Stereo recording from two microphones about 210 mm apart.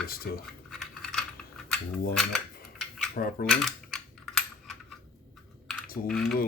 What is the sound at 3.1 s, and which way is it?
Speech, 45° left (ahead or behind).